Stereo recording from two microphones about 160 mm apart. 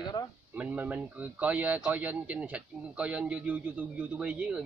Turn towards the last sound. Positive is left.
turn(degrees=-10)  # may be behind; listen again after turning